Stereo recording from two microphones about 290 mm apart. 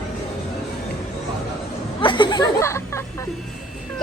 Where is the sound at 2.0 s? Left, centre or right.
Centre.